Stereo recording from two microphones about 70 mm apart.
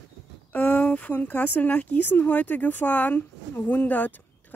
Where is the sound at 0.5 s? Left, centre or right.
Left.